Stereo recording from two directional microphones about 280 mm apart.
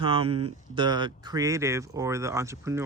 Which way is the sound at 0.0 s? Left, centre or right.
Right.